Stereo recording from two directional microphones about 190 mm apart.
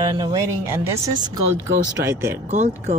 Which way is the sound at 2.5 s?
40° right (ahead or behind).